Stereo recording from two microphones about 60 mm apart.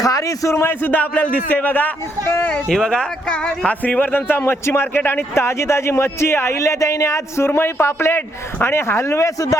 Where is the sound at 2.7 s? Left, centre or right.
Centre.